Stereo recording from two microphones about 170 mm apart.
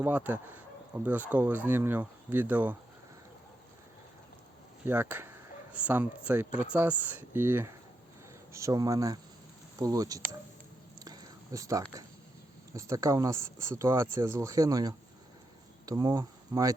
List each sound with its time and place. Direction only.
0.0 s speech: 10° right (ahead or behind)
4.9 s speech: 10° right (ahead or behind)
11.0 s a sound: 20° right (ahead or behind)
12.7 s speech: 20° right (ahead or behind)